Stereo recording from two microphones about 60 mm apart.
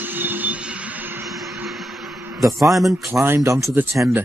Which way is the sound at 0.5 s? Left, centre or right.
Centre.